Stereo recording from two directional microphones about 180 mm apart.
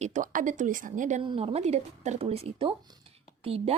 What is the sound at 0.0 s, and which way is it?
Speech, 45° right (ahead or behind).